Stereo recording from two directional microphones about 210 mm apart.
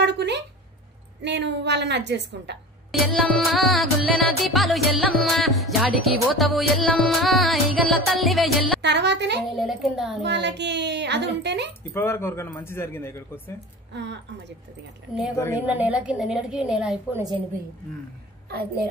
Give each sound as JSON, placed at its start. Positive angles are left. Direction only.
{"t": 0.0, "sound": "a sound", "side_deg": -55}
{"t": 1.2, "sound": "speech", "side_deg": -55}
{"t": 2.9, "sound": "music", "side_deg": 0}
{"t": 8.8, "sound": "speech", "side_deg": -55}
{"t": 9.6, "sound": "music", "side_deg": 0}
{"t": 10.2, "sound": "speech", "side_deg": -55}
{"t": 11.9, "sound": "a man's voice", "side_deg": 10}
{"t": 13.9, "sound": "speech", "side_deg": -55}
{"t": 15.3, "sound": "a man's voice", "side_deg": 15}
{"t": 15.6, "sound": "music", "side_deg": -5}